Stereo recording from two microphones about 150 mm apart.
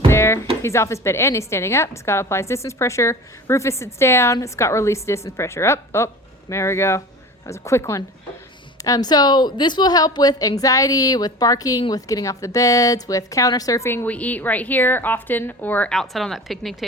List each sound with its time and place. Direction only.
0.1 s music: 15° left (ahead or behind)
0.6 s a woman's voice: 20° left (ahead or behind); by 16.7 s centre (ahead or behind)